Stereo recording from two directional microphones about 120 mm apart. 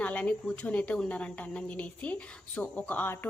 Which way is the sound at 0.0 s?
10° left (ahead or behind).